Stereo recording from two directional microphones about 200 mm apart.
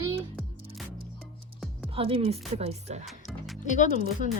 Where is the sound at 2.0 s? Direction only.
30° right (ahead or behind).